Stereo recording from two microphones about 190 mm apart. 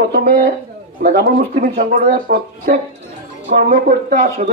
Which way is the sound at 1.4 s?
45° right (ahead or behind).